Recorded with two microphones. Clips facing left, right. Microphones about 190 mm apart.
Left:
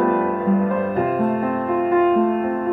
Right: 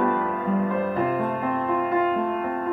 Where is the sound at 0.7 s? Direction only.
55° left (ahead or behind).